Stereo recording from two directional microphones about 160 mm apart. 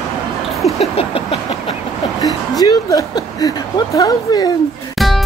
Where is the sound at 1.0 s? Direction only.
35° left (ahead or behind).